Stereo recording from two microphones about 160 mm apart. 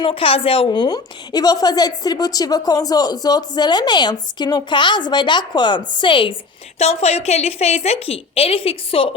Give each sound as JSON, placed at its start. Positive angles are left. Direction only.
{"t": 0.0, "sound": "a woman's voice", "side_deg": 35}
{"t": 6.7, "sound": "a woman's voice", "side_deg": 40}